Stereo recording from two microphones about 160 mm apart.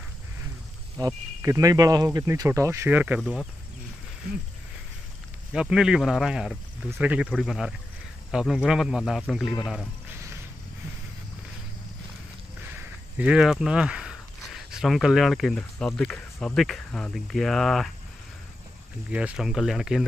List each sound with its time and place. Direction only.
0.9 s speech: 15° right (ahead or behind)
3.2 s speech: centre (ahead or behind)
5.5 s speech: 5° right (ahead or behind)
13.2 s speech: 5° right (ahead or behind)
19.0 s speech: 5° right (ahead or behind)